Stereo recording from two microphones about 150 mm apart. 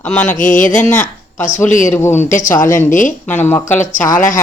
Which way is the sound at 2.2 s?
60° left (ahead or behind).